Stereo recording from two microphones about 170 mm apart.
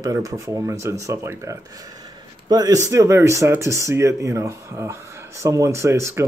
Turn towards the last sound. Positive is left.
turn(degrees=-15)  # may be behind; listen again after turning